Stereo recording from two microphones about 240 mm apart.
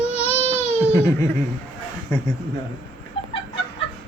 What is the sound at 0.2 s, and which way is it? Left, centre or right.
Baby cry, left.